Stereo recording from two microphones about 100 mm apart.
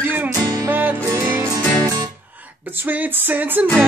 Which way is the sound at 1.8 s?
40° right (ahead or behind).